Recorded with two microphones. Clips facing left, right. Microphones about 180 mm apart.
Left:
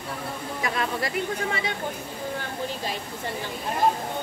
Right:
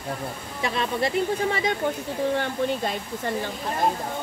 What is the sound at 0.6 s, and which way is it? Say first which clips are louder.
Speech: right 3 dB; 25° right (ahead or behind).